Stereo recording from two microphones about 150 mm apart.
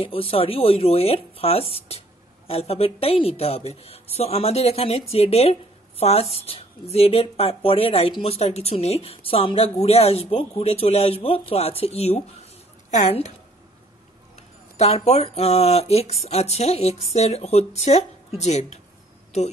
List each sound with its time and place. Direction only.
0.0 s speech: 40° left (ahead or behind)
14.3 s speech: 45° left (ahead or behind)